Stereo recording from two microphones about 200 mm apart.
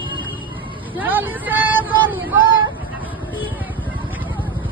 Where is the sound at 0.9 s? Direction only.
10° right (ahead or behind).